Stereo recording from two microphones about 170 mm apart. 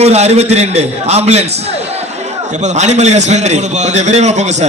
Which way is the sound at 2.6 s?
45° right (ahead or behind).